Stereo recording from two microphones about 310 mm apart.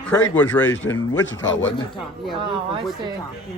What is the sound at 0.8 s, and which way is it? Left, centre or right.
Speech, left.